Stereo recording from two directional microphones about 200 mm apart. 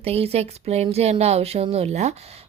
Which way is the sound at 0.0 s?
30° right (ahead or behind).